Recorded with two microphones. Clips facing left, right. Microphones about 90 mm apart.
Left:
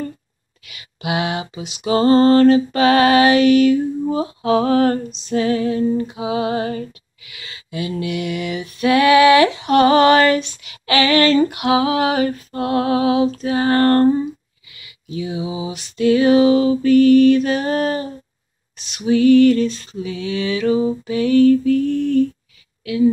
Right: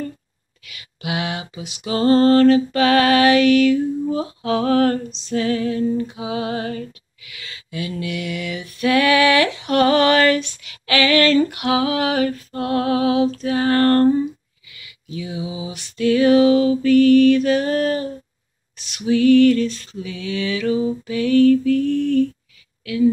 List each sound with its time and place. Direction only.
0.7 s music: 25° left (ahead or behind)